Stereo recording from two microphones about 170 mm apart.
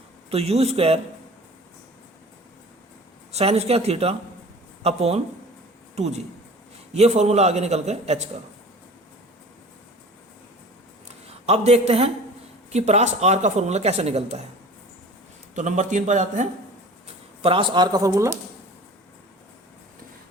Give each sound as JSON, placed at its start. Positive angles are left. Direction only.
{"t": 0.3, "sound": "speech", "side_deg": -35}
{"t": 3.3, "sound": "speech", "side_deg": -40}
{"t": 11.3, "sound": "a man's voice", "side_deg": -40}
{"t": 15.5, "sound": "speech", "side_deg": -45}
{"t": 17.4, "sound": "speech", "side_deg": -30}